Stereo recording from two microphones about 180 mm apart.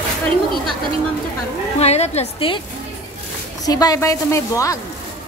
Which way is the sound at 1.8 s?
35° left (ahead or behind).